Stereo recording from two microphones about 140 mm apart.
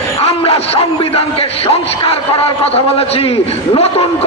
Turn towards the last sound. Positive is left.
turn(degrees=45)  # may be behind; listen again after turning